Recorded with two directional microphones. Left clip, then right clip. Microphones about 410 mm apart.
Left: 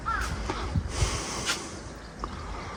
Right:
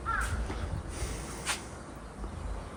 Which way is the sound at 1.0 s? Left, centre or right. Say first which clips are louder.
Left 11 dB; left.